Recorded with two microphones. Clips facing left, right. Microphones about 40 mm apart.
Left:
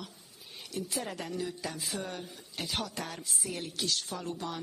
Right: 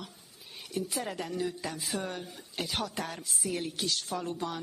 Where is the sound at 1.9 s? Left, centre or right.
Right.